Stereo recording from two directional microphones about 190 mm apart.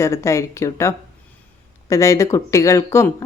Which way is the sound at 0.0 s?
15° left (ahead or behind).